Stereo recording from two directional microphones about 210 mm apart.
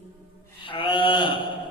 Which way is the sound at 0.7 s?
25° left (ahead or behind).